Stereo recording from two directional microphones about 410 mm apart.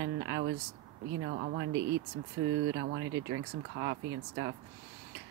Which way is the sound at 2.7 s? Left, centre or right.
Right.